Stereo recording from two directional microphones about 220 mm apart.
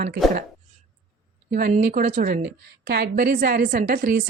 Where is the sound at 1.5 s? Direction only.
45° right (ahead or behind).